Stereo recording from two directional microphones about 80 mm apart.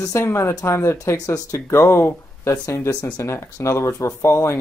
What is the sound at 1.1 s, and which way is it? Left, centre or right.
Speech, left.